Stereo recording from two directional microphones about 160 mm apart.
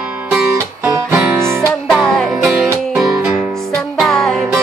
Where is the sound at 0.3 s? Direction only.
5° right (ahead or behind).